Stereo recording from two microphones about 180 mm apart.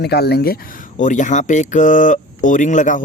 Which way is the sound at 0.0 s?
65° left (ahead or behind).